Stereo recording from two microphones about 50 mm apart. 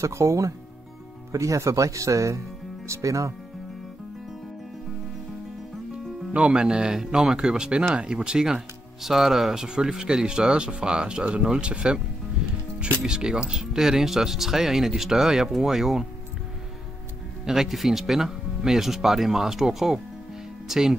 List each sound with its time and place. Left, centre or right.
0.0 s speech: right
6.3 s speech: right
12.4 s music: centre
13.0 s speech: centre
17.5 s speech: centre